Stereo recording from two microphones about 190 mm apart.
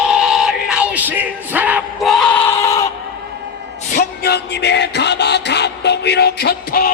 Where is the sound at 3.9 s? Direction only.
55° left (ahead or behind).